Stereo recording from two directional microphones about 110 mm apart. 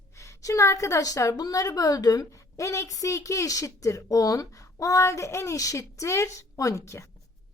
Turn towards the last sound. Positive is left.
turn(degrees=25)  # may be behind; listen again after turning